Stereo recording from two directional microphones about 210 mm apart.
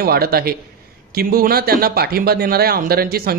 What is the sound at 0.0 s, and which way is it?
Speech, 45° right (ahead or behind).